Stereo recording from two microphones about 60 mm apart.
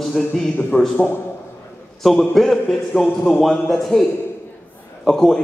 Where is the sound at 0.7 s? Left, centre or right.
Left.